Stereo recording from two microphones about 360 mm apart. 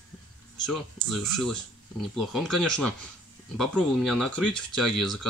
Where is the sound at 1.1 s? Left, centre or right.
Centre.